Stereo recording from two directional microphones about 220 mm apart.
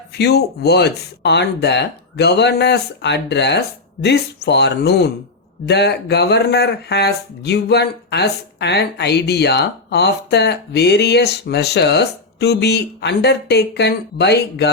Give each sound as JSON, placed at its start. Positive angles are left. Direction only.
{"t": 0.2, "sound": "speech", "side_deg": 45}